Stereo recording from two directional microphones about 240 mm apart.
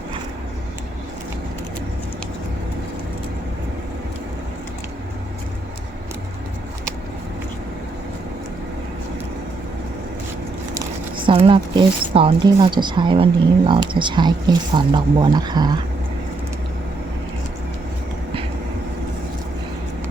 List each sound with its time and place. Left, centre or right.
11.3 s speech: right